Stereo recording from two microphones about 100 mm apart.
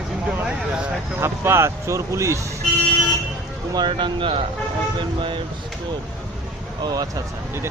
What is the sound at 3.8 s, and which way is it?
Speech, 50° right (ahead or behind).